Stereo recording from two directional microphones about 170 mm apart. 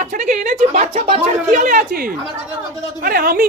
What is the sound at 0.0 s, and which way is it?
A woman's voice, 50° right (ahead or behind).